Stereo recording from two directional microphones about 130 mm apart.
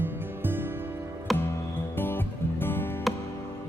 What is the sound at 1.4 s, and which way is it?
Music, 15° left (ahead or behind).